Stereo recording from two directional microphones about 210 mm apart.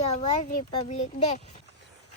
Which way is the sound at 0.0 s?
30° left (ahead or behind).